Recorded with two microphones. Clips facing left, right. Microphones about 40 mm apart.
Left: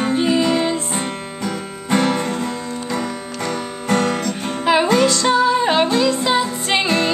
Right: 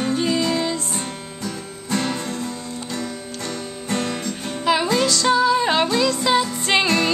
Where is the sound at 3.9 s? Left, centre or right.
Left.